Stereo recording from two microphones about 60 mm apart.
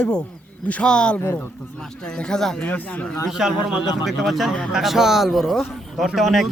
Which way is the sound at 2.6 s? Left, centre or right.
Left.